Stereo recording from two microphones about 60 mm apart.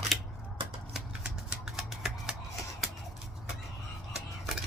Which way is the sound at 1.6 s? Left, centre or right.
Centre.